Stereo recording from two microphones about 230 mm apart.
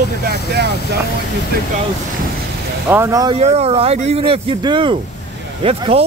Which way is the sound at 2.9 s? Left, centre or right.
Centre.